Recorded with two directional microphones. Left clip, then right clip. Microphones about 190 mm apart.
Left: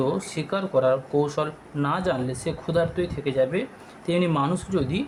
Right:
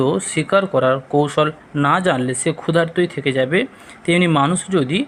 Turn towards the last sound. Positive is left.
turn(degrees=-20)  # may be behind; listen again after turning